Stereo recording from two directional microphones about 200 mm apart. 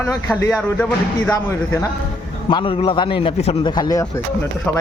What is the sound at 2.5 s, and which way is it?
A man's voice, 25° left (ahead or behind).